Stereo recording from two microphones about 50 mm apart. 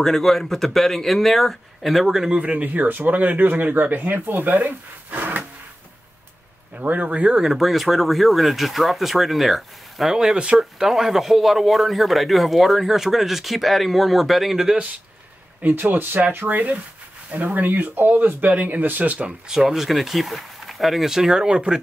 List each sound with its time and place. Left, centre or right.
0.0 s a man's voice: centre
2.2 s speech: right
6.7 s speech: right
7.3 s a man's voice: centre
10.1 s speech: centre
10.6 s a man's voice: centre
15.7 s speech: right
19.2 s speech: centre